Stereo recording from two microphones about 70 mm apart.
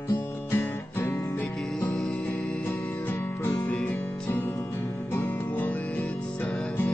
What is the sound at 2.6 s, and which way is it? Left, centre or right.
Music, left.